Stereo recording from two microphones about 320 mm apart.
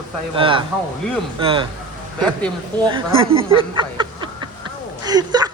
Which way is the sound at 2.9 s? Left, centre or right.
Centre.